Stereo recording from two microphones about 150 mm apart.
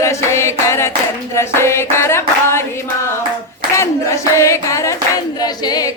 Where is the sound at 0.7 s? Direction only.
20° left (ahead or behind).